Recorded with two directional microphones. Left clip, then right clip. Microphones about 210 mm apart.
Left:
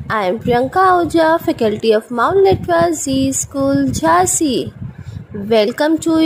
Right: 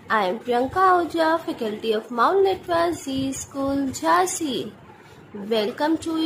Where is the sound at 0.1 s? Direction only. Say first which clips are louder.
Left 6 dB; 35° left (ahead or behind).